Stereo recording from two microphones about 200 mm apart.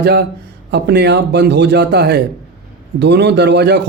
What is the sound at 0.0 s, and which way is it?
Speech, 55° right (ahead or behind).